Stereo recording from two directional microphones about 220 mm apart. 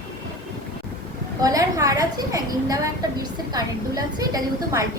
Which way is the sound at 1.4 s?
15° right (ahead or behind).